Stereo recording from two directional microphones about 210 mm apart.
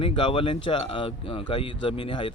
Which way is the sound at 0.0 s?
25° left (ahead or behind).